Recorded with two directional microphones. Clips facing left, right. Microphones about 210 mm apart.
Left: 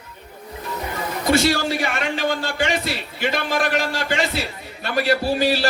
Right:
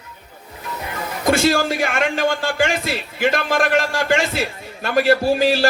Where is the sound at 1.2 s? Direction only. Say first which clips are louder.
Right 2 dB; 50° right (ahead or behind).